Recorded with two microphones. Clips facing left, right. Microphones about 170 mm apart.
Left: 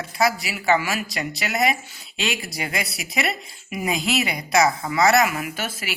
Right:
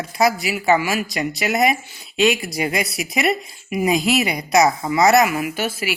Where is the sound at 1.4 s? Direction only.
20° right (ahead or behind).